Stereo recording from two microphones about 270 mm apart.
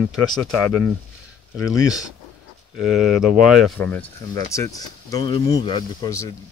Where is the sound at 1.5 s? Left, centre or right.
Centre.